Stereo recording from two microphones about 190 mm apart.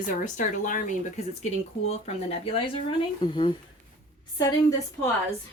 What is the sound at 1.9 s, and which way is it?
Speech, 30° left (ahead or behind).